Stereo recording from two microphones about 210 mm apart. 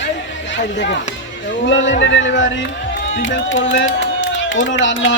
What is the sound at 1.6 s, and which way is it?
Speech, 65° left (ahead or behind).